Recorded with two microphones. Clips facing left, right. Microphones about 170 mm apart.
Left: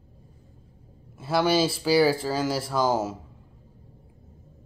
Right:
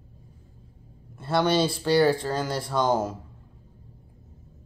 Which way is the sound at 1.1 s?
5° left (ahead or behind).